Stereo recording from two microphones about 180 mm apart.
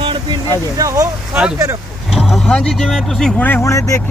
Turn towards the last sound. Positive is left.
turn(degrees=15)  # may be behind; listen again after turning